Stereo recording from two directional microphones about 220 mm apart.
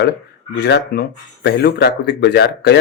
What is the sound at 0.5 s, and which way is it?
Speech, 50° left (ahead or behind).